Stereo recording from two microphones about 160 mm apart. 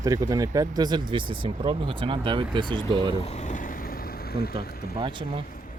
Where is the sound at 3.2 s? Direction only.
45° left (ahead or behind); by 5.0 s 75° left (ahead or behind).